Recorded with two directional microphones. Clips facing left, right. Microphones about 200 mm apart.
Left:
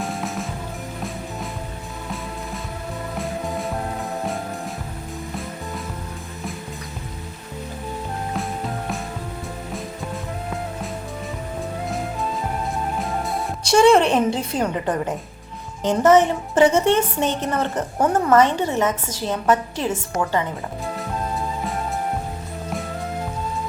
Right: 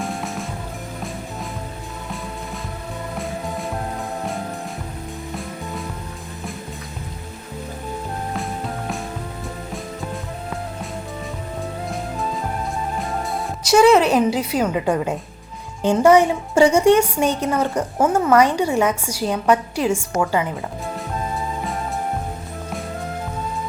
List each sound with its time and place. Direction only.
0.0 s music: centre (ahead or behind)
8.3 s music: centre (ahead or behind)
11.9 s music: centre (ahead or behind)
15.8 s a woman's voice: 15° right (ahead or behind)
16.6 s speech: 25° left (ahead or behind)
17.0 s a woman's voice: 10° right (ahead or behind)
20.9 s music: centre (ahead or behind)